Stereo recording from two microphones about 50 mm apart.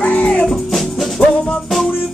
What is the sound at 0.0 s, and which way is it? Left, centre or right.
Music, left.